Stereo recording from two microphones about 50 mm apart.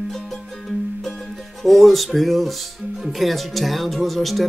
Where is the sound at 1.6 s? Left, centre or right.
Centre.